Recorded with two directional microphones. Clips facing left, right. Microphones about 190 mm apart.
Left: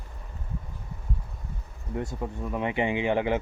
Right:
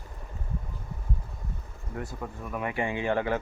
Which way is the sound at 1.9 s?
25° left (ahead or behind).